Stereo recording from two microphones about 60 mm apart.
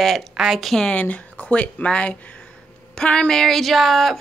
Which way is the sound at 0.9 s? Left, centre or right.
Left.